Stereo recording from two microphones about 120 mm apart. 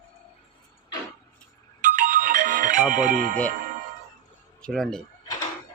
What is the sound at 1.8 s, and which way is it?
Ringtone, 90° right.